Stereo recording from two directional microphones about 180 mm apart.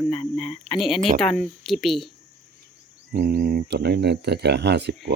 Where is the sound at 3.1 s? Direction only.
60° right (ahead or behind).